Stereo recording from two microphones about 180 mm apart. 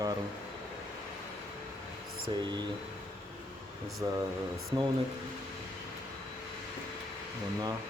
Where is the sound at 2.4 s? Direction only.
25° right (ahead or behind).